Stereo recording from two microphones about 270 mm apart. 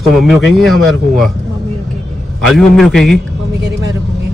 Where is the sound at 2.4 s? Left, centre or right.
Centre.